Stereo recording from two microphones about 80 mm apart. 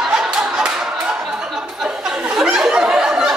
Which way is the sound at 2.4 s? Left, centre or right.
Centre.